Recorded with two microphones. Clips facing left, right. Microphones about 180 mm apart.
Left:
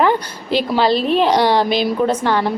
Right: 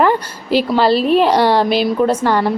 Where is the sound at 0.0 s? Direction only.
Centre (ahead or behind).